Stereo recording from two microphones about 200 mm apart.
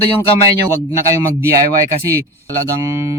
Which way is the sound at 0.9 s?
15° right (ahead or behind).